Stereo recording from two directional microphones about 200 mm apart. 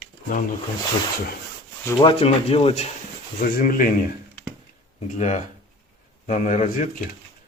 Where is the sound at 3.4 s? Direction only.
45° left (ahead or behind).